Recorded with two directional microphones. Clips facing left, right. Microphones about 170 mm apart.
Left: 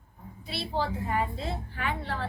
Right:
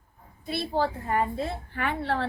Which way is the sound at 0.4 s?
50° right (ahead or behind).